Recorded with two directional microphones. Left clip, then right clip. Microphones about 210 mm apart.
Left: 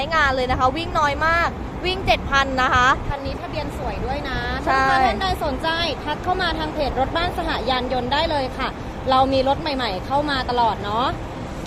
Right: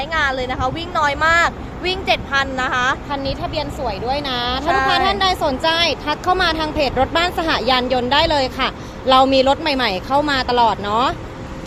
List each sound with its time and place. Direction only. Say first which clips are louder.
0.0 s a woman's voice: even; 5° left (ahead or behind)
3.1 s speech: right 5 dB; 40° right (ahead or behind)